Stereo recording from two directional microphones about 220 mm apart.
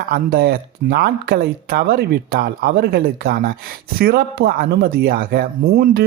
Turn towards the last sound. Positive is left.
turn(degrees=-45)  # may be behind; listen again after turning